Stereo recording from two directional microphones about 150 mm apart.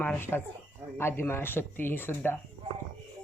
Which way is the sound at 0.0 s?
15° left (ahead or behind).